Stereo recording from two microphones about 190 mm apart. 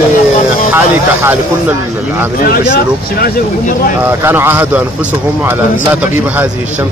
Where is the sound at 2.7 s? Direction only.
50° left (ahead or behind).